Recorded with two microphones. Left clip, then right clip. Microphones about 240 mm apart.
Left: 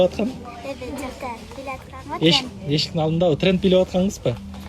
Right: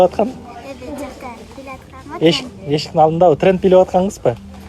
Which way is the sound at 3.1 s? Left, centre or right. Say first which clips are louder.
Right 8 dB; centre.